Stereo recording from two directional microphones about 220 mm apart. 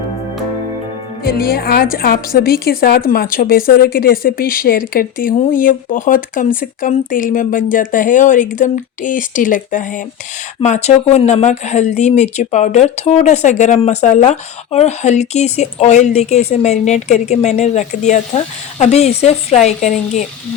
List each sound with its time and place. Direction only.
1.2 s a woman's voice: 45° left (ahead or behind)